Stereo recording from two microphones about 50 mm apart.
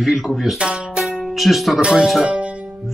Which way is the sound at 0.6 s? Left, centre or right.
Centre.